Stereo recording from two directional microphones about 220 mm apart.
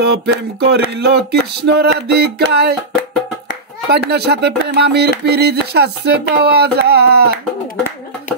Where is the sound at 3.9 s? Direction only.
50° right (ahead or behind).